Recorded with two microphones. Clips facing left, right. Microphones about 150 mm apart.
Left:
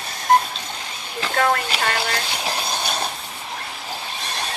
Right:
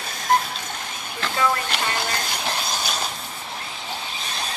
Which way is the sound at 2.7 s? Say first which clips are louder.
Left 2 dB; 60° left (ahead or behind).